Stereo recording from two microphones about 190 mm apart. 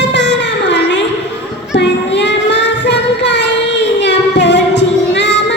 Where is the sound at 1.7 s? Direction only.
65° left (ahead or behind).